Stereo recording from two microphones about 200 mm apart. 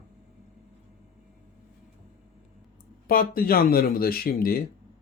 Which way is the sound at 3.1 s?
45° left (ahead or behind).